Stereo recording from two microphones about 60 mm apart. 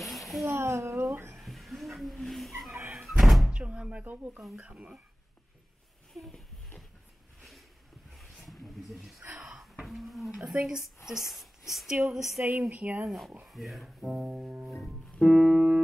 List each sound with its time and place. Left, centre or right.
0.0 s a sound: centre
0.5 s speech: right
1.4 s vehicle: centre
2.9 s door: centre
3.5 s speech: centre
4.0 s speech: right
6.1 s speech: centre
8.2 s a sound: centre
9.3 s a sound: centre
9.8 s a sound: centre
10.3 s speech: centre
12.4 s speech: right
13.4 s speech: centre